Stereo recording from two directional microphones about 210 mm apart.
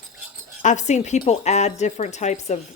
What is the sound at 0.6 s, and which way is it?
Speech, 35° left (ahead or behind).